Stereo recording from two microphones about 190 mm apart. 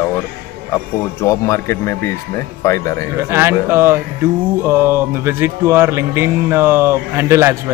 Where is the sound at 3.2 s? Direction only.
15° right (ahead or behind).